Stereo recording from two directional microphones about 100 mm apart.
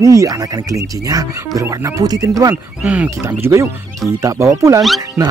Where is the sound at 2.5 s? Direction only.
15° right (ahead or behind).